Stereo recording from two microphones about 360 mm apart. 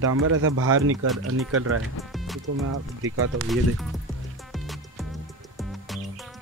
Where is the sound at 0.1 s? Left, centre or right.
Right.